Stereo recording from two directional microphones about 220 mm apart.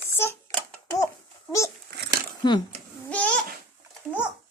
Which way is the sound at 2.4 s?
20° left (ahead or behind).